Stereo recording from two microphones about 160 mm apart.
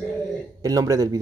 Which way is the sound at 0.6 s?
20° right (ahead or behind).